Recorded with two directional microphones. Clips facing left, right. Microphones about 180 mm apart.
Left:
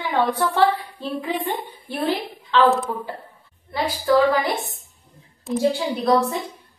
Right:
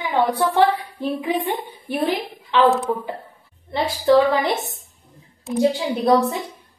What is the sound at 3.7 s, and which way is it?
A woman's voice, 25° right (ahead or behind).